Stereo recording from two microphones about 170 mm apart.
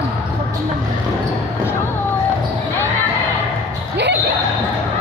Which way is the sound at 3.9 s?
85° right.